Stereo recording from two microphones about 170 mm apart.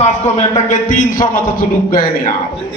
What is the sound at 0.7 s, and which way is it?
A man's voice, 50° left (ahead or behind).